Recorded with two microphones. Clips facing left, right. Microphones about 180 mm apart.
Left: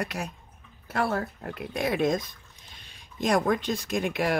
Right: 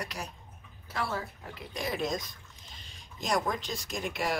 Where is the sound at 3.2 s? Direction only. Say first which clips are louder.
Left 7 dB; 55° left (ahead or behind).